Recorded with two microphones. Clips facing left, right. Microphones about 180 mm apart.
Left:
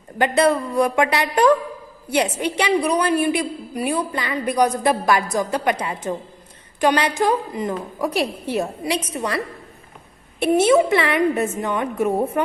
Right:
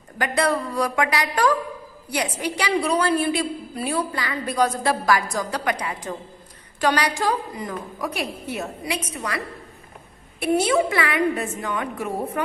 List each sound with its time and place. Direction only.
0.2 s a woman's voice: 25° left (ahead or behind)
10.4 s a woman's voice: 25° left (ahead or behind)